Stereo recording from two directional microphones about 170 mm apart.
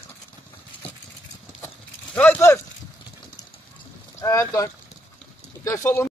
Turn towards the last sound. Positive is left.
turn(degrees=15)  # may be behind; listen again after turning